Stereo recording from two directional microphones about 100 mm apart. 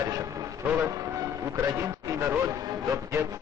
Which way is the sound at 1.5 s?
30° right (ahead or behind).